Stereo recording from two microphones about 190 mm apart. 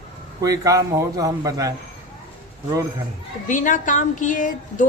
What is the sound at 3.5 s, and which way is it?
A woman's voice, 40° left (ahead or behind).